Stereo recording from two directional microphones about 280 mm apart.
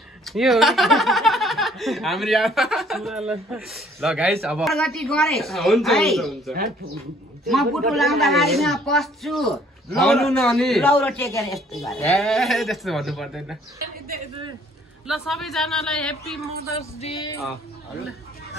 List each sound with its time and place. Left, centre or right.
0.2 s speech: centre
15.0 s speech: centre
17.0 s a sound: centre